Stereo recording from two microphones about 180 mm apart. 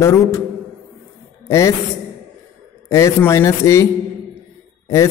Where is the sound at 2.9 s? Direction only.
15° left (ahead or behind).